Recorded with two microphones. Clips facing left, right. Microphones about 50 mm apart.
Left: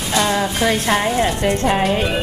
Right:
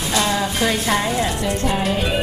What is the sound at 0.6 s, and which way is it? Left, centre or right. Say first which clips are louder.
A woman's voice: left 3 dB; left.